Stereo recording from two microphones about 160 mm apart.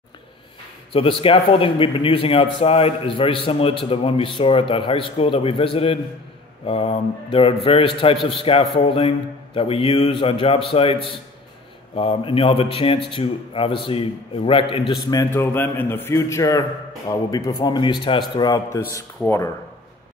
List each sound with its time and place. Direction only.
0.9 s a man's voice: 35° left (ahead or behind)
15.0 s a man's voice: 20° left (ahead or behind)